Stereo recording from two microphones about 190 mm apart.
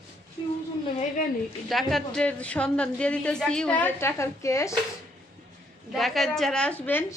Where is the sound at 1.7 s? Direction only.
Centre (ahead or behind).